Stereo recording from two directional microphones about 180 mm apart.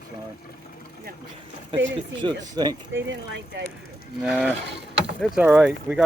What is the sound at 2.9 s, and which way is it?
Speech, 90° right.